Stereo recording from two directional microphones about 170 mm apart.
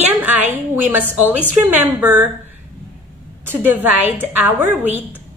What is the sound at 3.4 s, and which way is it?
A woman's voice, 10° right (ahead or behind).